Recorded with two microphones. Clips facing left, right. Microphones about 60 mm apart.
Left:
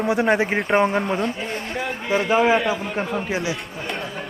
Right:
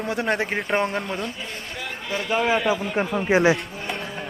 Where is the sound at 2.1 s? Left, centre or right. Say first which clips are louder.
Left 7 dB; left.